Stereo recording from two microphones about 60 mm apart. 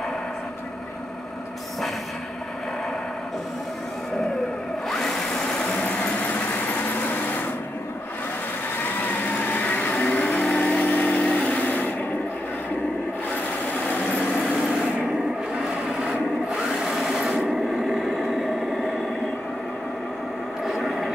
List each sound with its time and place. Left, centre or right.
4.8 s a sound: centre
6.5 s vehicle: left
9.0 s vehicle: left
15.6 s a sound: centre
16.8 s vehicle: centre
20.6 s vehicle: centre